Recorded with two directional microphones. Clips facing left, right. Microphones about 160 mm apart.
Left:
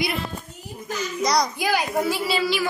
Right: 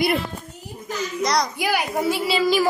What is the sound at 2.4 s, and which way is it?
Music, 45° right (ahead or behind).